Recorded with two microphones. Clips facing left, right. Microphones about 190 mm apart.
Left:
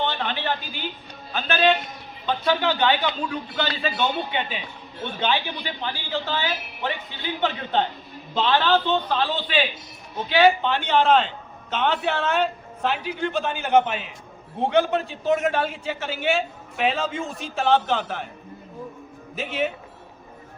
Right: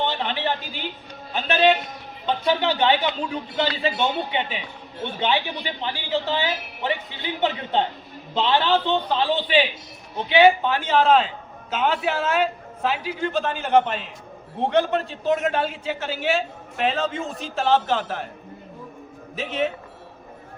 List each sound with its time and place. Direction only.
0.0 s a sound: 25° right (ahead or behind)
1.3 s a man's voice: 25° right (ahead or behind)
10.7 s a man's voice: 5° right (ahead or behind)
19.4 s a man's voice: centre (ahead or behind)